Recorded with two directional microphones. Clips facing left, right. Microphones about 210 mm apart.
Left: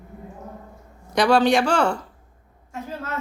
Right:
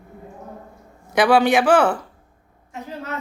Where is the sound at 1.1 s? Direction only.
5° right (ahead or behind).